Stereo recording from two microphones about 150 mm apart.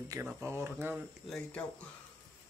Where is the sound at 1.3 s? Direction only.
5° left (ahead or behind).